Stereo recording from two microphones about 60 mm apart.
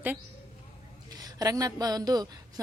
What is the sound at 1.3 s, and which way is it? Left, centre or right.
A woman's voice, right.